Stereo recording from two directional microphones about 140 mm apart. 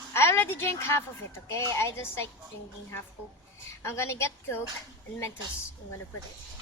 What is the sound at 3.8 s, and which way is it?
Speech, 20° left (ahead or behind).